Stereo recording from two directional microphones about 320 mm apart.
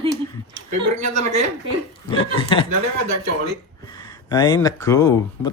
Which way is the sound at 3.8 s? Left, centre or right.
Centre.